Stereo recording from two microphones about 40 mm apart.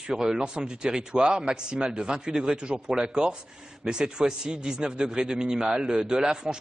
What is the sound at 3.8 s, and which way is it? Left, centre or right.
A man's voice, centre.